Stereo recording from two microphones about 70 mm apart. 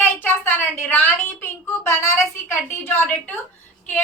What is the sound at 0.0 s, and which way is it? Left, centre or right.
A woman's voice, left.